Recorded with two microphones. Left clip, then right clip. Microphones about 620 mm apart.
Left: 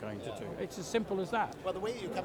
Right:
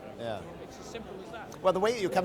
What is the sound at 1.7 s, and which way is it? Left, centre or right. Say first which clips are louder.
Speech: right 10 dB; right.